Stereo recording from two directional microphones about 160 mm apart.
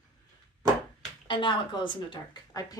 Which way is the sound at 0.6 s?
20° right (ahead or behind).